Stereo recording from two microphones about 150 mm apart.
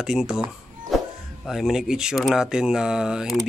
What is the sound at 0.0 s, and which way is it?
Speech, 5° right (ahead or behind).